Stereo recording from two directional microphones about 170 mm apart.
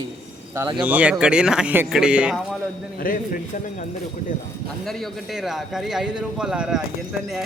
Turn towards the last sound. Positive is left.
turn(degrees=-5)  # may be behind; listen again after turning